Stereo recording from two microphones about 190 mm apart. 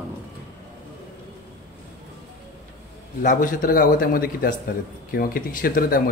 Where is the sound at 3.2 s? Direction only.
45° left (ahead or behind).